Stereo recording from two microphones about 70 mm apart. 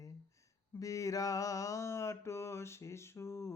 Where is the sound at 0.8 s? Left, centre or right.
Left.